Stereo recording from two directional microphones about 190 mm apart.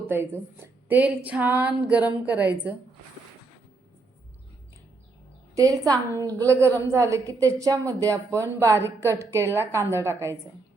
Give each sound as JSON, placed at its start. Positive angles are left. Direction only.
{"t": 0.1, "sound": "a woman's voice", "side_deg": -10}
{"t": 5.5, "sound": "a woman's voice", "side_deg": -20}